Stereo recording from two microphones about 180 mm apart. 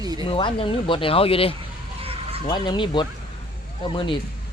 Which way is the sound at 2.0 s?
30° right (ahead or behind).